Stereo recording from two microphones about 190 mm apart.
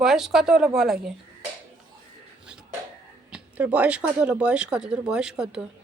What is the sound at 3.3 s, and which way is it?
Speech, 5° right (ahead or behind).